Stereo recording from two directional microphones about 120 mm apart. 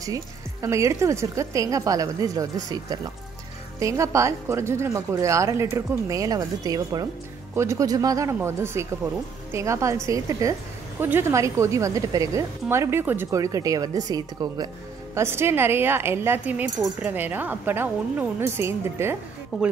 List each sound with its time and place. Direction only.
0.0 s speech: 25° right (ahead or behind)
15.1 s speech: 20° right (ahead or behind)
19.5 s speech: 5° right (ahead or behind)